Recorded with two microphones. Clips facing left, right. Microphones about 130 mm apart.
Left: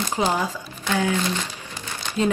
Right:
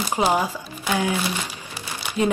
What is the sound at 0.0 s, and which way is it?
Speech, 10° right (ahead or behind).